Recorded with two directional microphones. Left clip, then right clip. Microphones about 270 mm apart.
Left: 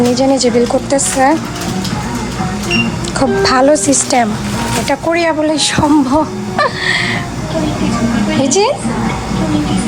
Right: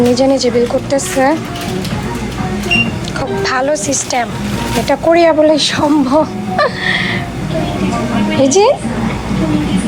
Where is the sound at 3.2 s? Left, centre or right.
Left.